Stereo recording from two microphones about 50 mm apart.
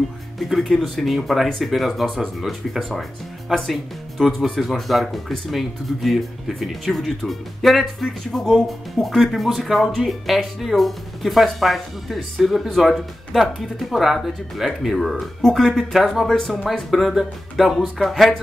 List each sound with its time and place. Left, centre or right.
0.4 s speech: centre
17.1 s speech: centre
17.6 s speech: centre